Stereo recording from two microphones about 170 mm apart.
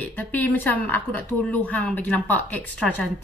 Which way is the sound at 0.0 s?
10° left (ahead or behind).